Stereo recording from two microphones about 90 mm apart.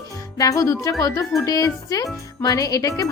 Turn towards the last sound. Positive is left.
turn(degrees=40)  # may be behind; listen again after turning